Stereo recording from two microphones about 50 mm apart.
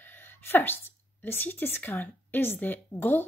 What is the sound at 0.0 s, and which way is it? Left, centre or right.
A woman's voice, left.